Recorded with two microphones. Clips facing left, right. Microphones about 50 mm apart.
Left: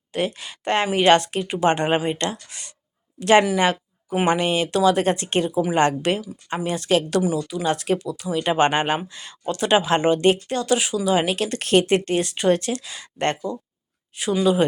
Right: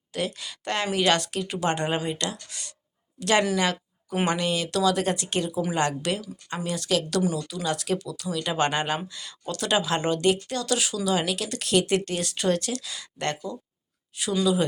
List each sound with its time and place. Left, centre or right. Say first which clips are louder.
0.1 s a woman's voice: left 5 dB; left
7.2 s speech: left 4 dB; centre
7.4 s speech: left 5 dB; left